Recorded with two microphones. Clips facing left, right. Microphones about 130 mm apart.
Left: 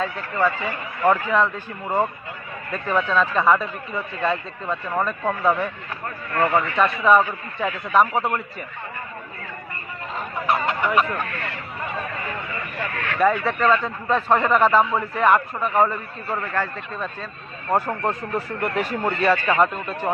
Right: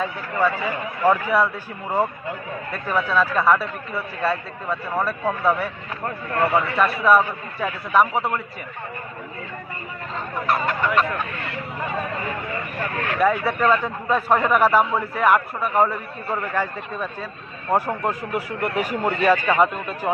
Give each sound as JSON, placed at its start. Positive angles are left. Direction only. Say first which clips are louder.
{"t": 0.0, "sound": "a man's voice", "louder": "even", "side_deg": -10}
{"t": 2.7, "sound": "speech", "louder": "left 1 dB", "side_deg": -5}
{"t": 10.2, "sound": "fowl", "louder": "even", "side_deg": 20}
{"t": 13.1, "sound": "a man's voice", "louder": "left 1 dB", "side_deg": -5}